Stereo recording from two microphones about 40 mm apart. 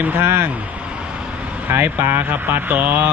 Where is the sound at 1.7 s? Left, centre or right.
Right.